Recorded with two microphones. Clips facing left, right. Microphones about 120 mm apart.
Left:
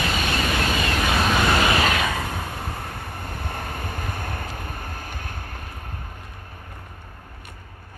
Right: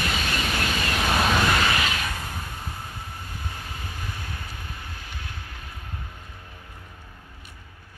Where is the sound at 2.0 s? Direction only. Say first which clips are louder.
Left 7 dB; 90° left; by 5.7 s 50° left (ahead or behind).